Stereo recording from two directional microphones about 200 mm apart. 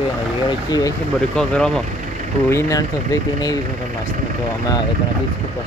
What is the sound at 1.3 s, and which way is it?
Speech, 5° left (ahead or behind).